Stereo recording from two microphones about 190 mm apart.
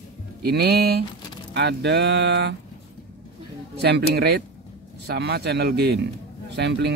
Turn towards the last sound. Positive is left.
turn(degrees=-65)  # may be behind; listen again after turning